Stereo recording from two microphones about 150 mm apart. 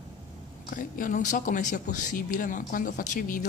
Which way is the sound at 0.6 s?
65° left (ahead or behind).